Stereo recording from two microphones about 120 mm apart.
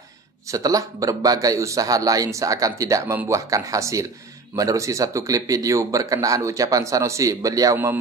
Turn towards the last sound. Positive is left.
turn(degrees=-25)  # may be behind; listen again after turning